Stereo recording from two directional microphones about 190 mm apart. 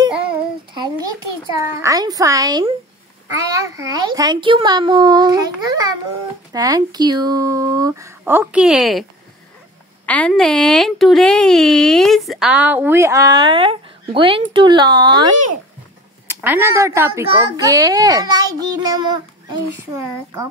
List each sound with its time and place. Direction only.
0.7 s a child's voice: 20° right (ahead or behind); by 9.0 s centre (ahead or behind)
10.0 s a woman's voice: 5° left (ahead or behind); by 15.3 s 20° right (ahead or behind)
16.3 s a child's voice: 10° right (ahead or behind)